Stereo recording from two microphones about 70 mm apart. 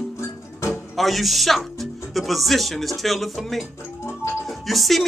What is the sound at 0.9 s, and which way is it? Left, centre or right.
Speech, centre.